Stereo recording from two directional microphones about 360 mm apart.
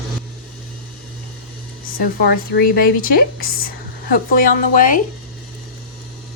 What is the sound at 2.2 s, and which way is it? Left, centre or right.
Speech, left.